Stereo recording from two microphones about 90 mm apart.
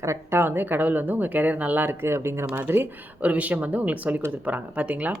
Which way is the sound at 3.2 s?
15° right (ahead or behind).